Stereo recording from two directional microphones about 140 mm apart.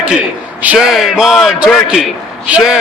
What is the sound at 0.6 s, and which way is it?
A man's voice, 10° right (ahead or behind).